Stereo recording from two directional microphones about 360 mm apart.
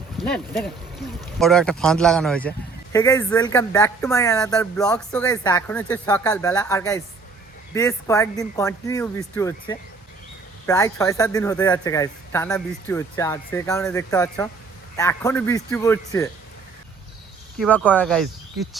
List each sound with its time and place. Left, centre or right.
0.2 s a sound: centre
1.4 s speech: centre
17.6 s speech: centre